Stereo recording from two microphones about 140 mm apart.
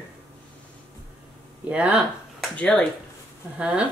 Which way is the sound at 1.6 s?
10° right (ahead or behind).